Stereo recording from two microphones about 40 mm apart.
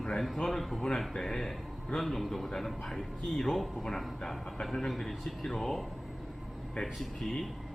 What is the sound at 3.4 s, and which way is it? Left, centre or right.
Speech, centre.